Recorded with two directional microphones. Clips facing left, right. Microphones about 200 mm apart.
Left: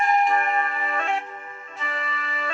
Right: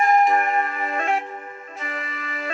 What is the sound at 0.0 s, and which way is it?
Music, 45° right (ahead or behind).